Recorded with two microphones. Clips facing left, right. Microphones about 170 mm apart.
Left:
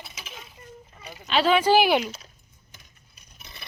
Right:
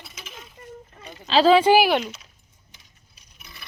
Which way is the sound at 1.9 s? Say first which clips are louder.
Even; 5° left (ahead or behind).